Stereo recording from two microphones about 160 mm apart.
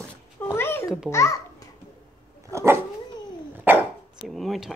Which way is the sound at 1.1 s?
20° left (ahead or behind).